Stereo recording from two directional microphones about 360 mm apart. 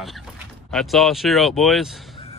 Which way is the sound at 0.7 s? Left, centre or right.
Centre.